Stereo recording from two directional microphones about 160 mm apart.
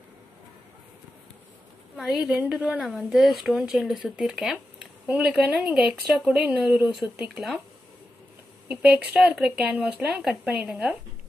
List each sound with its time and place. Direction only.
2.0 s a woman's voice: 5° right (ahead or behind)
8.6 s speech: 5° right (ahead or behind)